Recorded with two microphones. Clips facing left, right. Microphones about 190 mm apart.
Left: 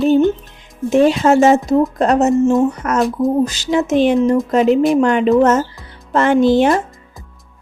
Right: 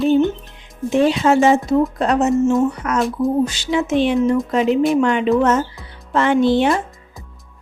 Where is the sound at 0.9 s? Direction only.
45° left (ahead or behind).